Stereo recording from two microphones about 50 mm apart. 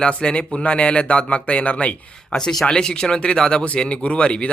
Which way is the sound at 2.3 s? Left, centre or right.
Centre.